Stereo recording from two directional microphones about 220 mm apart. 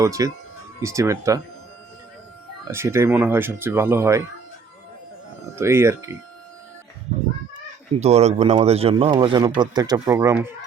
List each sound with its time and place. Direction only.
0.0 s speech: 15° right (ahead or behind)
2.6 s speech: 10° right (ahead or behind)
5.5 s speech: 10° right (ahead or behind)
7.1 s a sound: 30° right (ahead or behind)
7.9 s speech: 30° right (ahead or behind); by 10.5 s 10° right (ahead or behind)